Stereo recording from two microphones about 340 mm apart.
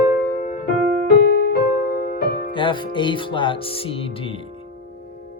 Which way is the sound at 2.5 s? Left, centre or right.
Centre.